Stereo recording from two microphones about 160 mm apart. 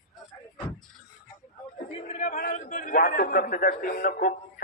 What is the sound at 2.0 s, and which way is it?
A man's voice, 45° left (ahead or behind).